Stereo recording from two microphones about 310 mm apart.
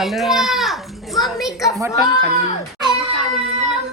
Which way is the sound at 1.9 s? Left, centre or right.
Centre.